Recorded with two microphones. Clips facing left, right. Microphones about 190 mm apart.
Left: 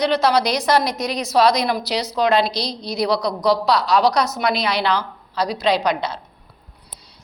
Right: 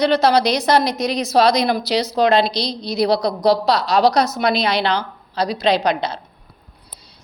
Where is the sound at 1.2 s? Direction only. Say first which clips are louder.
Right 1 dB; centre (ahead or behind).